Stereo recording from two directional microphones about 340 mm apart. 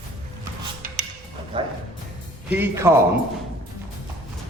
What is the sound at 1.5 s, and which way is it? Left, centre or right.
A man's voice, centre.